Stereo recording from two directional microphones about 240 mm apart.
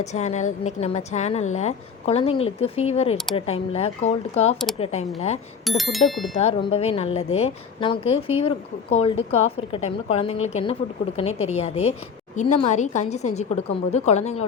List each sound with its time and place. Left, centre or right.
0.0 s a woman's voice: left
5.6 s speech: centre
6.4 s a woman's voice: left